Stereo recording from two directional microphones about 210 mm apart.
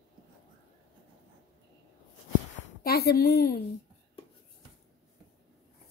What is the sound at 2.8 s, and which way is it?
Speech, 50° left (ahead or behind).